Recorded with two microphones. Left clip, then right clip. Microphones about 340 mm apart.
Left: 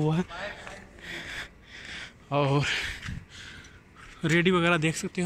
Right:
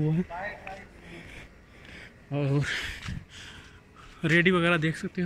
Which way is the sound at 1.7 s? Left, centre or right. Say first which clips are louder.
Left 5 dB; centre.